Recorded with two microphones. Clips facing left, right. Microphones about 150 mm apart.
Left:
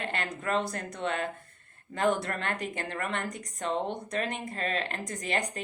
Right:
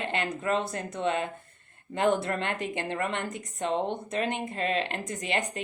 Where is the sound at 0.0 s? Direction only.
25° right (ahead or behind).